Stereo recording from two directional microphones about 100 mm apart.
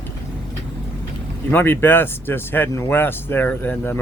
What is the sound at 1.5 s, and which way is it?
Speech, 20° left (ahead or behind).